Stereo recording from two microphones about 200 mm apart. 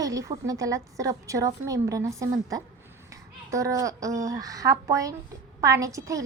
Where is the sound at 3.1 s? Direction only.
15° right (ahead or behind).